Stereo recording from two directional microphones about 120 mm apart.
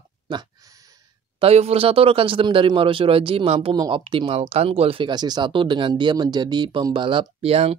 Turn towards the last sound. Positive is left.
turn(degrees=-55)  # may be behind; listen again after turning